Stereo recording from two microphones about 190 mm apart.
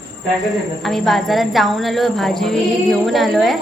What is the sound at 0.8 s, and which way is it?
Speech, centre (ahead or behind).